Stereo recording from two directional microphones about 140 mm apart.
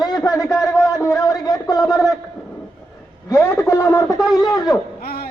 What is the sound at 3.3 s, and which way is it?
A man's voice, 20° left (ahead or behind).